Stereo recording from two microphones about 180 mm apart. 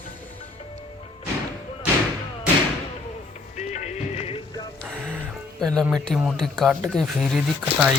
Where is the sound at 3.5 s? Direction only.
40° left (ahead or behind).